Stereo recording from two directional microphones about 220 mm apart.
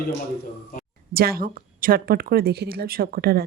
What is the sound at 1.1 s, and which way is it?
A woman's voice, 45° right (ahead or behind).